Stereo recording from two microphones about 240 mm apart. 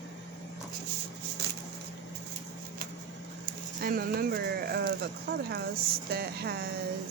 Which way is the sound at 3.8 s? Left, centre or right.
Right.